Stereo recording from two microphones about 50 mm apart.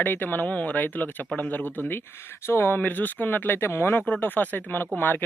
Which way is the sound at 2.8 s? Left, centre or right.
Left.